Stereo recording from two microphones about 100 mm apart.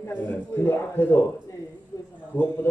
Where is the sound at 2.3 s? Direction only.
20° left (ahead or behind).